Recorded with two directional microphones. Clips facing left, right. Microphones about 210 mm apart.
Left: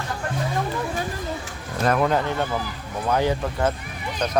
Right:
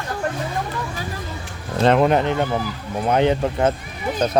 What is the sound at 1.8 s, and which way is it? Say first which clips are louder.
Speech: right 5 dB; 25° right (ahead or behind).